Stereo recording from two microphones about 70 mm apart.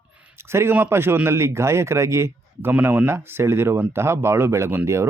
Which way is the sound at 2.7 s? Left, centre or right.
Right.